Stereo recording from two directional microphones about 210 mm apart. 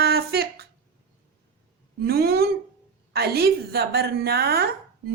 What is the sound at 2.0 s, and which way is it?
A woman's voice, 45° right (ahead or behind).